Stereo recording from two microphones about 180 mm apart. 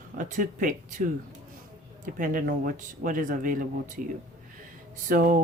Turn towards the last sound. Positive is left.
turn(degrees=-50)  # may be behind; listen again after turning